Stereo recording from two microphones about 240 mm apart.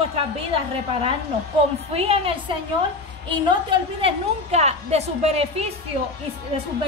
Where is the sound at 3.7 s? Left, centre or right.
Right.